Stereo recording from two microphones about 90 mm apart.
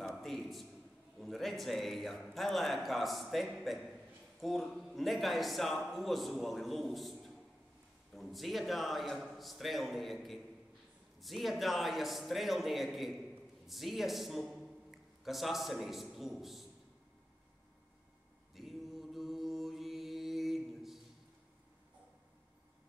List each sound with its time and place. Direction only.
0.0 s a sound: centre (ahead or behind)
1.2 s a man's voice: centre (ahead or behind)
18.5 s mantra: centre (ahead or behind)